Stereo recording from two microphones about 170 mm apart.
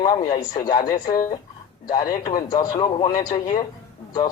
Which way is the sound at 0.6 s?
25° left (ahead or behind).